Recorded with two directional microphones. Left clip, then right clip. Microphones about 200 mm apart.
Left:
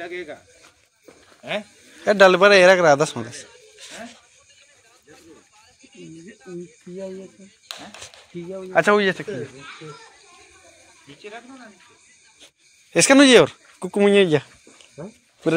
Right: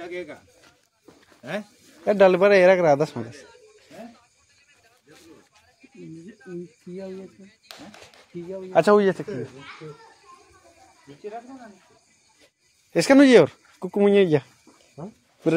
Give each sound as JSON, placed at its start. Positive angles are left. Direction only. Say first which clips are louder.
{"t": 0.0, "sound": "speech", "louder": "left 2 dB", "side_deg": -50}
{"t": 2.0, "sound": "a man's voice", "louder": "left 3 dB", "side_deg": -5}
{"t": 7.7, "sound": "a sound", "louder": "left 7 dB", "side_deg": -55}
{"t": 8.7, "sound": "speech", "louder": "even", "side_deg": -25}
{"t": 12.9, "sound": "speech", "louder": "left 2 dB", "side_deg": -10}